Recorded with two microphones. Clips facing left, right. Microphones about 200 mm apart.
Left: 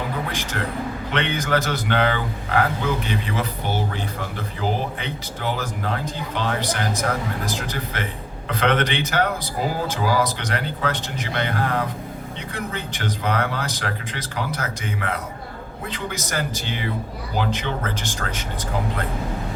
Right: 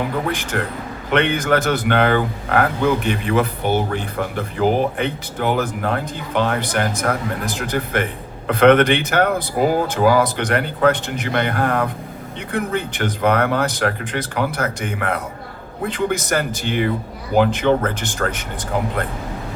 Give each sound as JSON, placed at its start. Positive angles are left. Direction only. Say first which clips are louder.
{"t": 0.3, "sound": "music", "louder": "right 6 dB", "side_deg": -50}
{"t": 1.1, "sound": "speech", "louder": "right 6 dB", "side_deg": -55}